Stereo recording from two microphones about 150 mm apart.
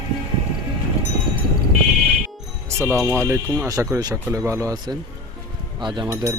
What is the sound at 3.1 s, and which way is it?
Speech, 15° right (ahead or behind).